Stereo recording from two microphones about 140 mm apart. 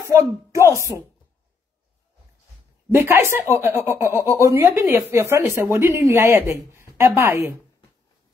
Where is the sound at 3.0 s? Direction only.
15° right (ahead or behind).